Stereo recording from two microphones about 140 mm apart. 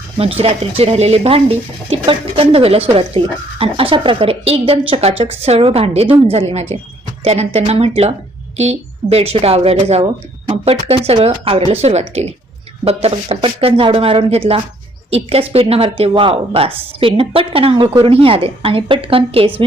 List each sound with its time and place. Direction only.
0.2 s speech: 45° right (ahead or behind)